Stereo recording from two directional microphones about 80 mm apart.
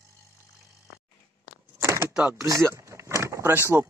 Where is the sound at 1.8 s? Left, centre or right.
Right.